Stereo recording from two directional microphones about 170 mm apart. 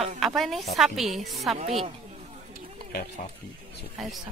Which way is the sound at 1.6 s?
35° right (ahead or behind).